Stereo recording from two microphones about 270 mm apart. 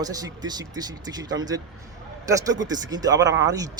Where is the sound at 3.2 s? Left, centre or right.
Right.